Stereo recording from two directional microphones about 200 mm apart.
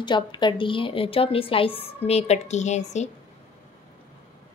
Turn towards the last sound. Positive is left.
turn(degrees=35)  # may be behind; listen again after turning